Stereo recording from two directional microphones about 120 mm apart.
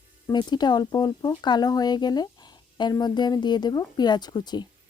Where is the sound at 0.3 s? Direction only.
35° left (ahead or behind).